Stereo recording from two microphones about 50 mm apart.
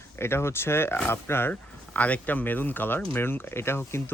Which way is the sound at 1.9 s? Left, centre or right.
Left.